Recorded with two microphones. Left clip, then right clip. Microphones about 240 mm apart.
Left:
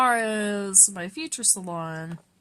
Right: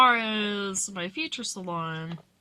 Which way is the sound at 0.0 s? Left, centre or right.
Left.